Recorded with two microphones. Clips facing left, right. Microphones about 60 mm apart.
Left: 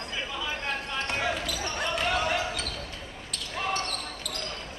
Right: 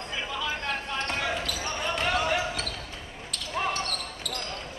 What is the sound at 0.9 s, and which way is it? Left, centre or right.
Basketball bounce, centre.